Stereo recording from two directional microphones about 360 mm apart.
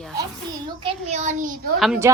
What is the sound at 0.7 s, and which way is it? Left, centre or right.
A child's voice, centre.